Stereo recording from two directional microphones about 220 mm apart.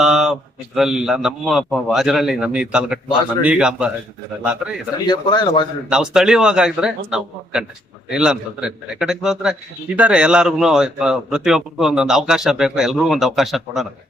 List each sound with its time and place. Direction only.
0.0 s a man's voice: centre (ahead or behind)
5.0 s speech: 20° left (ahead or behind)
5.9 s a man's voice: 5° right (ahead or behind)